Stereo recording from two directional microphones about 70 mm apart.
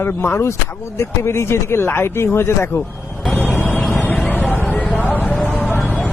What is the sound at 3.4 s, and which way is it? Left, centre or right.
Vehicle, left.